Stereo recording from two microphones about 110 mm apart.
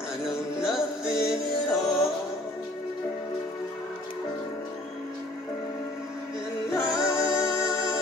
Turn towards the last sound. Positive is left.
turn(degrees=30)  # may be behind; listen again after turning